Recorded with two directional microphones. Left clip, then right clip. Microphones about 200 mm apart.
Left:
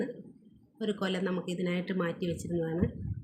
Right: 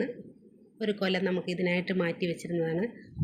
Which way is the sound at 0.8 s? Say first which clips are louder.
Right 4 dB; 5° left (ahead or behind).